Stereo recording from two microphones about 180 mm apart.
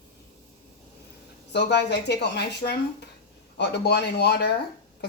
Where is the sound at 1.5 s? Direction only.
70° left (ahead or behind).